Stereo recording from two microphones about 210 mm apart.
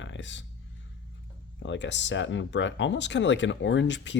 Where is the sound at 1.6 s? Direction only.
60° left (ahead or behind).